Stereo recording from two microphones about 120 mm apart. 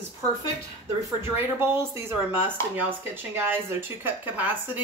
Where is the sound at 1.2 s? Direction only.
20° right (ahead or behind).